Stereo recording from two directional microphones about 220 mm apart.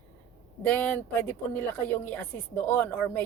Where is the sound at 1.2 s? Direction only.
10° left (ahead or behind).